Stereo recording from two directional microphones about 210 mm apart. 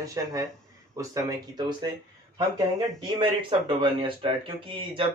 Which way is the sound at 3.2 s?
25° right (ahead or behind).